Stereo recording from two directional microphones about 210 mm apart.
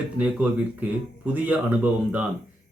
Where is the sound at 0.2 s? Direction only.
5° right (ahead or behind).